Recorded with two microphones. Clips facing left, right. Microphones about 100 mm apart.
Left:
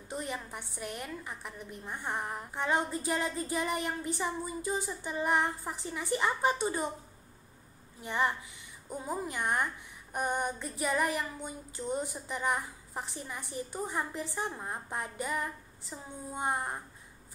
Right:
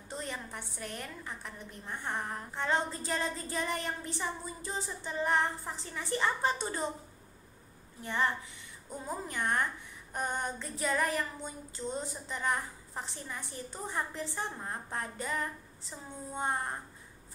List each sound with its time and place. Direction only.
0.1 s a woman's voice: 10° left (ahead or behind)
8.0 s a woman's voice: 15° left (ahead or behind)